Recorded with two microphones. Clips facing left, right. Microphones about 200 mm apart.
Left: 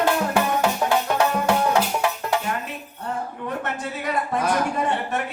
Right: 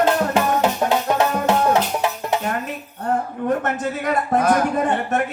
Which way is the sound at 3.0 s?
50° right (ahead or behind).